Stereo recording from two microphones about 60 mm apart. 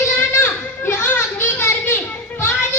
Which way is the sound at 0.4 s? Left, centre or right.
Left.